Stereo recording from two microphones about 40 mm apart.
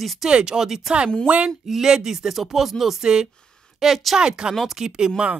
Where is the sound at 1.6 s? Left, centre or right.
Centre.